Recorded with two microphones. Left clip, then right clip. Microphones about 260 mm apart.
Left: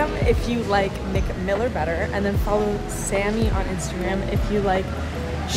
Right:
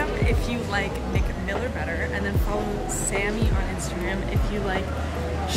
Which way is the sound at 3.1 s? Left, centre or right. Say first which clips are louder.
Left 5 dB; centre.